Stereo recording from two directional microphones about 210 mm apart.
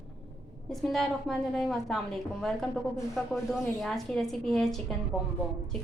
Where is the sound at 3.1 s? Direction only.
Centre (ahead or behind).